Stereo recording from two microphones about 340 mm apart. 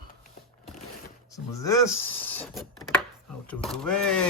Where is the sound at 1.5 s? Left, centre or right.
Centre.